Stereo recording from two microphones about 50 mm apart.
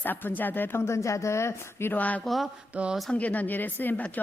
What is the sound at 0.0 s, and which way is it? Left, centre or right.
Speech, left.